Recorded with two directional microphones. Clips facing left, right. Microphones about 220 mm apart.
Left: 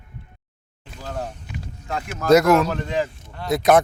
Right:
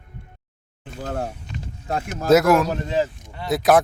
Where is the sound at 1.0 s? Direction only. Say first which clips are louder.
Right 3 dB; 55° right (ahead or behind).